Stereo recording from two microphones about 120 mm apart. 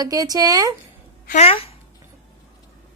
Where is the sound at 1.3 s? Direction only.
55° left (ahead or behind).